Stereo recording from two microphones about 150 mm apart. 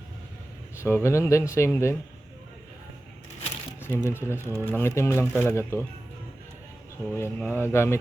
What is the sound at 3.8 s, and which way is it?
Speech, 15° left (ahead or behind).